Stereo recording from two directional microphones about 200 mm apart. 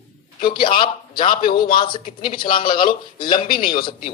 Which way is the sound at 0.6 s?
25° left (ahead or behind).